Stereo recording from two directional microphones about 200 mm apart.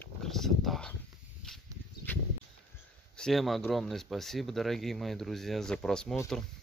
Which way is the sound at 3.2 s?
Centre (ahead or behind).